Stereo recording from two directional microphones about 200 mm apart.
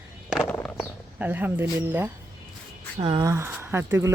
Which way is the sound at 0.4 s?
10° left (ahead or behind).